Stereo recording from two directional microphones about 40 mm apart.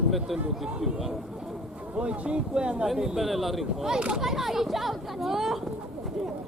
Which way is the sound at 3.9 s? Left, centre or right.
Right.